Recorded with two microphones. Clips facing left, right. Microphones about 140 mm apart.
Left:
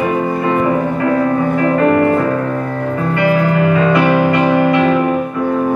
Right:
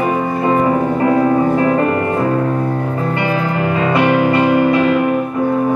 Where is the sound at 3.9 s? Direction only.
30° right (ahead or behind).